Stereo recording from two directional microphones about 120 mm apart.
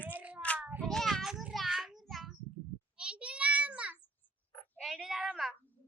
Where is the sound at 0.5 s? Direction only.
15° right (ahead or behind).